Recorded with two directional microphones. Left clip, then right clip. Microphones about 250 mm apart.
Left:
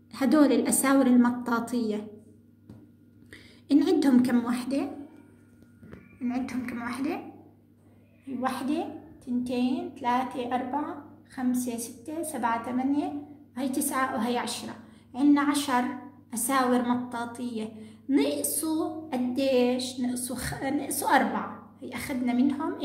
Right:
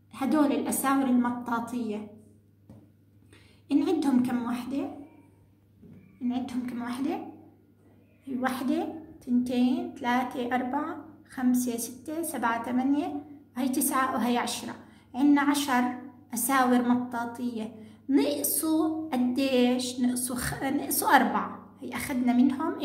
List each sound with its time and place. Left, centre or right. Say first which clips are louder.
0.1 s a woman's voice: left 4 dB; centre
3.6 s a woman's voice: left 3 dB; centre
6.2 s a woman's voice: even; centre
8.4 s a woman's voice: even; centre